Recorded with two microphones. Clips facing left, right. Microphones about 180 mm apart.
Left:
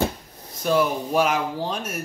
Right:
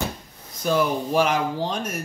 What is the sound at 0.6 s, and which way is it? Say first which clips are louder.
Speech: left 1 dB; centre (ahead or behind).